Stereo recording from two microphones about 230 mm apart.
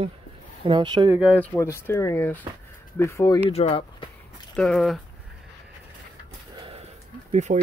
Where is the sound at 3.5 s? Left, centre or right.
Left.